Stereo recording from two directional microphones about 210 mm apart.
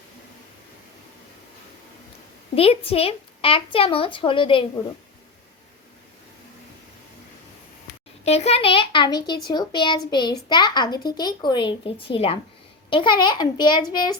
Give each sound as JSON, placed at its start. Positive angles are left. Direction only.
{"t": 2.6, "sound": "speech", "side_deg": 30}
{"t": 8.2, "sound": "speech", "side_deg": 30}